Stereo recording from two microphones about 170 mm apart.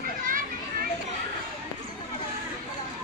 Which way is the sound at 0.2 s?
55° right (ahead or behind).